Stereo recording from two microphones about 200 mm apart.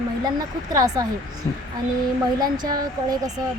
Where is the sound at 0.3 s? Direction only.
15° right (ahead or behind).